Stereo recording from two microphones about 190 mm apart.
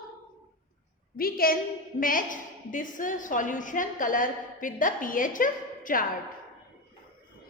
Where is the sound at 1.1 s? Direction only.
50° left (ahead or behind).